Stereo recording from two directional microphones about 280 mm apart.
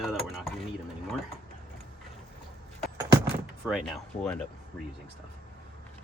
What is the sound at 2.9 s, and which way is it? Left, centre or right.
Keys jangling, centre.